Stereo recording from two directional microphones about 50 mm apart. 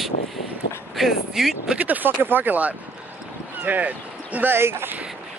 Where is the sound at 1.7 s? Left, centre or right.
Right.